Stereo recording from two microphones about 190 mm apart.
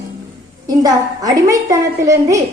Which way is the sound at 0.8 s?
20° right (ahead or behind).